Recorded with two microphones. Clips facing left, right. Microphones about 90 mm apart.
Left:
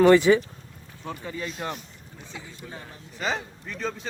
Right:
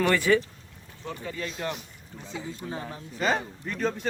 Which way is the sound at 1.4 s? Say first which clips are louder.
Even; 25° left (ahead or behind).